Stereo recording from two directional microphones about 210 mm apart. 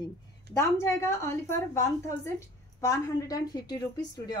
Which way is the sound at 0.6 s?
15° left (ahead or behind).